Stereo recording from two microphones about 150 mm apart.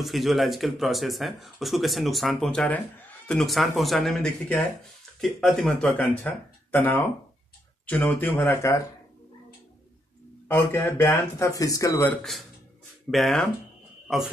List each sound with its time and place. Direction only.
0.0 s speech: centre (ahead or behind); by 8.8 s 15° left (ahead or behind)
10.5 s speech: 15° left (ahead or behind)
13.1 s a man's voice: centre (ahead or behind)